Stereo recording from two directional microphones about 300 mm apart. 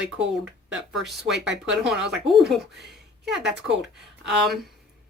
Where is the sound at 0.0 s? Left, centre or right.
Centre.